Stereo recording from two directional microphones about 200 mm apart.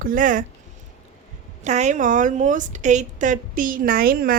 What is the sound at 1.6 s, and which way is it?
A woman's voice, 35° right (ahead or behind).